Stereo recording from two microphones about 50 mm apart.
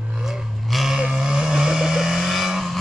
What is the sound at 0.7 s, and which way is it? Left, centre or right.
Livestock, centre.